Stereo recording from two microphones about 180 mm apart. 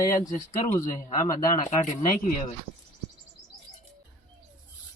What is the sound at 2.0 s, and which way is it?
Speech, 45° left (ahead or behind).